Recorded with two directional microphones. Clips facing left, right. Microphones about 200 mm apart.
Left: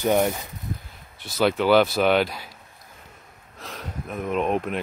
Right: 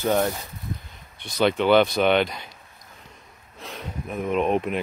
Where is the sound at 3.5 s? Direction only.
Centre (ahead or behind).